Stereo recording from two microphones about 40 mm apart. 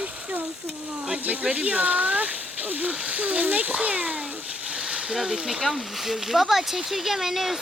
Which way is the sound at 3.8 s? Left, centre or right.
Right.